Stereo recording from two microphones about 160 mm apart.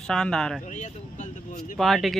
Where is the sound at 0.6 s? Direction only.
50° left (ahead or behind).